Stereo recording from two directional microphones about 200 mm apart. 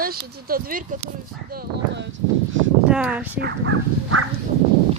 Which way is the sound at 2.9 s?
5° right (ahead or behind).